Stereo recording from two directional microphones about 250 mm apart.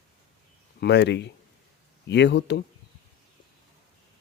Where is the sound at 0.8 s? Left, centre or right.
Left.